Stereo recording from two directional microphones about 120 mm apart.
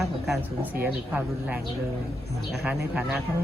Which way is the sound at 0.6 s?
15° right (ahead or behind).